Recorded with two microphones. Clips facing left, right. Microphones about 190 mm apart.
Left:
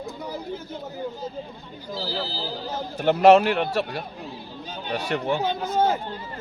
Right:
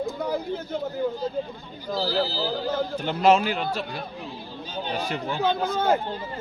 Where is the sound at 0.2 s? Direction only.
60° right (ahead or behind).